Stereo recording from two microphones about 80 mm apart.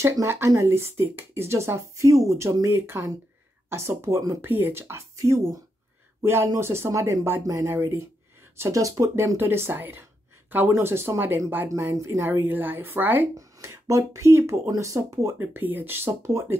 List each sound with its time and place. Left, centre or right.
0.0 s speech: right
7.7 s speech: right
9.4 s a woman's voice: right
11.9 s speech: right
12.3 s a woman's voice: right
13.4 s speech: right